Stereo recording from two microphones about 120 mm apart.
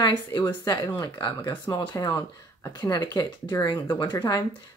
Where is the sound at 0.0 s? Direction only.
40° left (ahead or behind).